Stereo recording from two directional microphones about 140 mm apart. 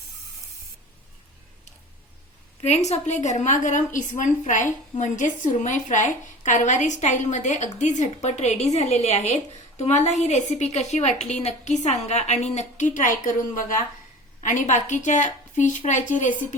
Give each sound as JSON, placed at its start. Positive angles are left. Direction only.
{"t": 2.6, "sound": "a woman's voice", "side_deg": 50}